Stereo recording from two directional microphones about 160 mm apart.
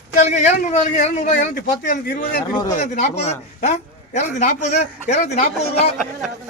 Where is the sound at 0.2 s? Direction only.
45° left (ahead or behind).